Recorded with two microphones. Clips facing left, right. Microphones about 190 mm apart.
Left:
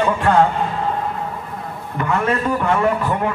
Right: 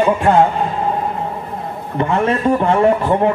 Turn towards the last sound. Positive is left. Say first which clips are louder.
# right 5 dB
turn(degrees=-30)  # may be behind; listen again after turning